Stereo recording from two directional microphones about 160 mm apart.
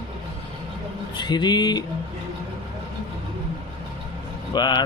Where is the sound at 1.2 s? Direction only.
25° left (ahead or behind).